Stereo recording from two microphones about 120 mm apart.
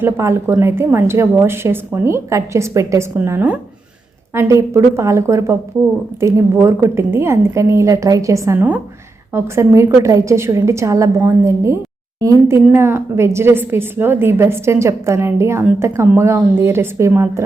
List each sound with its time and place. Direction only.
0.0 s a woman's voice: 20° right (ahead or behind)